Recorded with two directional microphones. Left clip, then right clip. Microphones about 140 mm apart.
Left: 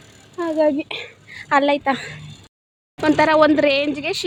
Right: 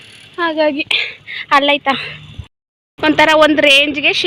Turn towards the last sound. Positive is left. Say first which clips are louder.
# right 9 dB
turn(degrees=0)  # may be behind; listen again after turning